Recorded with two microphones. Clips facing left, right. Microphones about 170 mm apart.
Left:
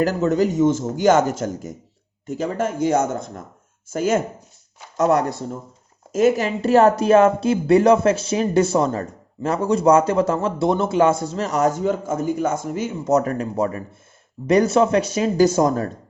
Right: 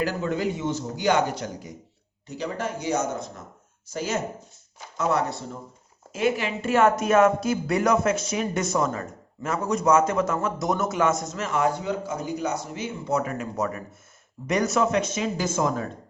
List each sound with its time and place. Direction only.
0.0 s speech: 45° left (ahead or behind)